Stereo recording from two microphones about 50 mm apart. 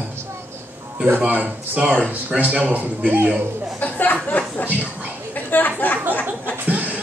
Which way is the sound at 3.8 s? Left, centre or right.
Left.